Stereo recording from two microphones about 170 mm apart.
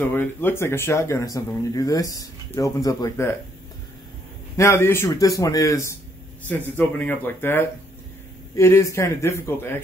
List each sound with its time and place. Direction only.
0.0 s speech: 10° left (ahead or behind)
4.6 s speech: 15° left (ahead or behind)